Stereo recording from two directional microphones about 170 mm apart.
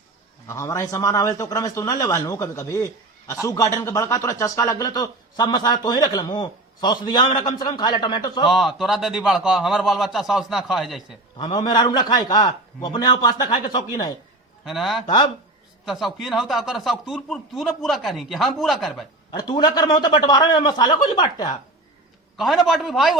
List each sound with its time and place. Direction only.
0.4 s speech: 15° left (ahead or behind)
8.4 s speech: centre (ahead or behind)
11.3 s speech: 25° left (ahead or behind)
14.6 s a man's voice: centre (ahead or behind)
19.3 s speech: 25° left (ahead or behind)
22.4 s speech: centre (ahead or behind)